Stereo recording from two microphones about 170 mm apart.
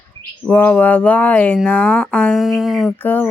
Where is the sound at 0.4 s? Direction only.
10° left (ahead or behind).